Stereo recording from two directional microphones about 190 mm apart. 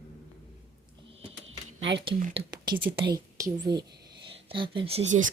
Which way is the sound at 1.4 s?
70° right (ahead or behind).